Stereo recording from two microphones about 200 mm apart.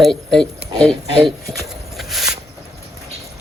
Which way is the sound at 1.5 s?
Centre (ahead or behind).